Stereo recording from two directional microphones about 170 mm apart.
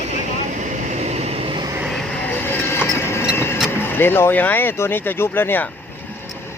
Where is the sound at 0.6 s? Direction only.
40° right (ahead or behind).